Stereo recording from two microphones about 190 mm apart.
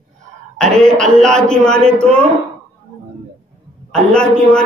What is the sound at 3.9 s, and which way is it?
Speech, 5° left (ahead or behind).